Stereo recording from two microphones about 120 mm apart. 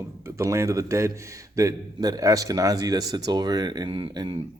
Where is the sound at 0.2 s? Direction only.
25° right (ahead or behind).